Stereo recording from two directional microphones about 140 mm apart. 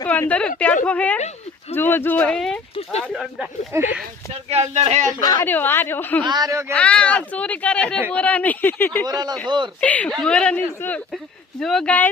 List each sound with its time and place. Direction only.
0.0 s a woman's voice: 15° left (ahead or behind)
3.3 s speech: 5° right (ahead or behind)
4.4 s speech: 50° right (ahead or behind)
5.2 s speech: 25° left (ahead or behind)
5.5 s speech: 15° left (ahead or behind)
6.2 s speech: 30° right (ahead or behind)
6.7 s speech: 10° left (ahead or behind)
9.0 s speech: 30° right (ahead or behind)
9.8 s speech: 10° left (ahead or behind)